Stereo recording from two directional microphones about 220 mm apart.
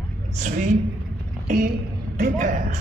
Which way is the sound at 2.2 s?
40° right (ahead or behind).